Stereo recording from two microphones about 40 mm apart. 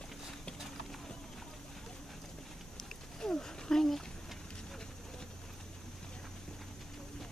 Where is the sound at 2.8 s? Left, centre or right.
Centre.